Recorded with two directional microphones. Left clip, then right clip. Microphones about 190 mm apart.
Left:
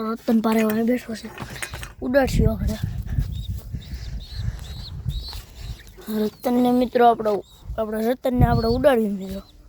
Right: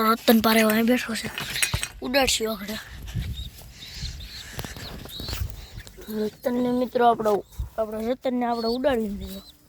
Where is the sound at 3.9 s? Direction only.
35° left (ahead or behind).